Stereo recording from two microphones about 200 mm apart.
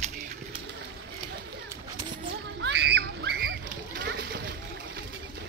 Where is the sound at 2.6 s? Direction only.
60° right (ahead or behind).